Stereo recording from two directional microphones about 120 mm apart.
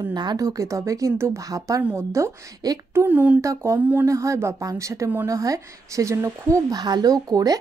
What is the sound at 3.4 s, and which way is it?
Speech, 25° right (ahead or behind).